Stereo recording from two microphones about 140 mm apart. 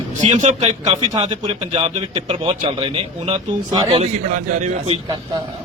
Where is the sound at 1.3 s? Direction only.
35° right (ahead or behind).